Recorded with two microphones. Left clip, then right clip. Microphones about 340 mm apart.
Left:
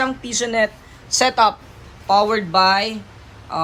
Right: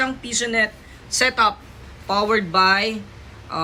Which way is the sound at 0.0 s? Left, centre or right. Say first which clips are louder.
Left 2 dB; centre.